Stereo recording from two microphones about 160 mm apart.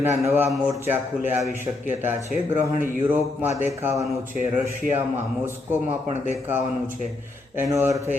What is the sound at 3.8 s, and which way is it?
Speech, 20° right (ahead or behind).